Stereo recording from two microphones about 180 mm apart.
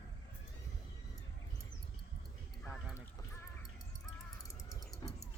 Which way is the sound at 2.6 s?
Centre (ahead or behind).